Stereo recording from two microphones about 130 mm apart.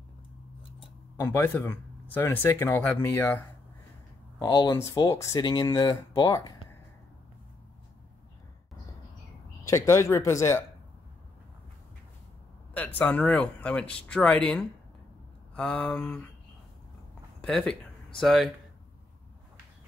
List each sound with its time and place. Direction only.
1.2 s speech: 20° left (ahead or behind)
4.4 s speech: 30° left (ahead or behind)
9.7 s speech: 20° left (ahead or behind)
12.7 s speech: 10° left (ahead or behind)
17.4 s speech: 5° left (ahead or behind)